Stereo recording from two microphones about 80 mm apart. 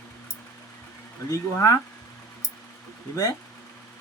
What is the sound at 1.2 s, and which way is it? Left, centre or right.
Speech, left.